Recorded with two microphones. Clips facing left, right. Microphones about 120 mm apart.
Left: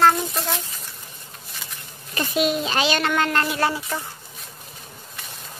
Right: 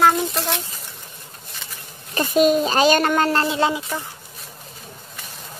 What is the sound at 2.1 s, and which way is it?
A woman's voice, 40° right (ahead or behind).